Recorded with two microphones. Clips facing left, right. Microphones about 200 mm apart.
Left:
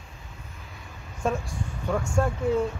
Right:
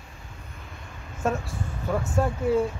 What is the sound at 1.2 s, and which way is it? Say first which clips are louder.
Speech: right 1 dB; 5° right (ahead or behind).